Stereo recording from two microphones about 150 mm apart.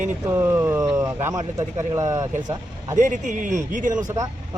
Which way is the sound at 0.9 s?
20° right (ahead or behind).